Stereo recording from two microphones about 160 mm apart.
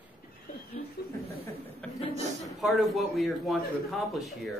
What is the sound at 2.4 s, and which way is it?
Speech, centre (ahead or behind).